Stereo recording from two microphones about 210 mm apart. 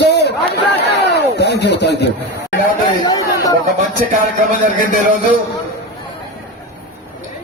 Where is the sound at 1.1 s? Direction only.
55° left (ahead or behind).